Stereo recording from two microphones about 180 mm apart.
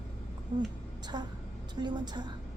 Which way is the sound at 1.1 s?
25° right (ahead or behind).